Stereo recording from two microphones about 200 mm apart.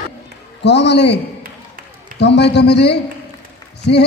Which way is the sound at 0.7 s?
60° left (ahead or behind).